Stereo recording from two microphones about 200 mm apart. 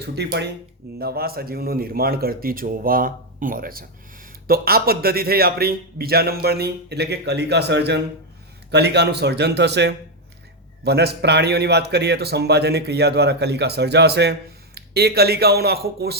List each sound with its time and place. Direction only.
0.0 s a man's voice: 55° right (ahead or behind)